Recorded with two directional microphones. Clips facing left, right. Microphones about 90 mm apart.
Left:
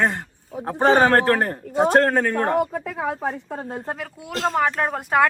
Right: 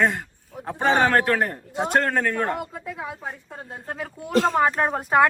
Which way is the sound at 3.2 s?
60° left (ahead or behind).